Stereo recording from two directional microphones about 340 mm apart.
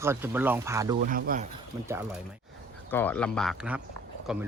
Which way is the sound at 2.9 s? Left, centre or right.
Centre.